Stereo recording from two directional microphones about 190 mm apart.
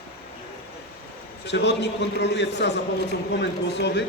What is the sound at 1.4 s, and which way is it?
A man's voice, 65° left (ahead or behind).